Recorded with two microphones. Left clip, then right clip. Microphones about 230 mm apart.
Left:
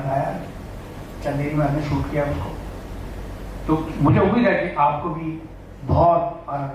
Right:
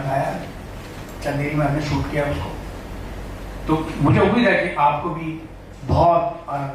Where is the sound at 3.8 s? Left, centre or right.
Centre.